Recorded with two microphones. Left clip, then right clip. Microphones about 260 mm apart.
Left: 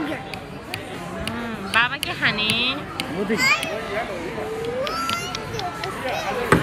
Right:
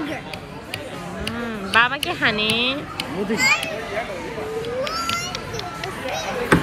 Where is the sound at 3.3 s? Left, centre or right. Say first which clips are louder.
Right 1 dB; left.